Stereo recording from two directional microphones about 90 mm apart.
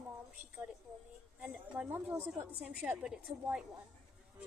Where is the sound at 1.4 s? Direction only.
15° right (ahead or behind).